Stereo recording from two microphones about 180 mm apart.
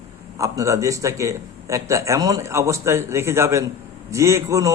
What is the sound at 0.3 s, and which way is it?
A man's voice, 20° right (ahead or behind).